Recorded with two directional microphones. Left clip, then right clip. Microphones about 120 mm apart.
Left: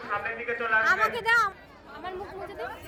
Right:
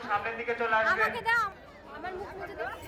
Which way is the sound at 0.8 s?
30° left (ahead or behind).